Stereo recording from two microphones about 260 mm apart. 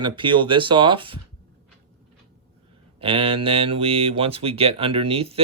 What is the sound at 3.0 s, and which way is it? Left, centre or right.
Speech, right.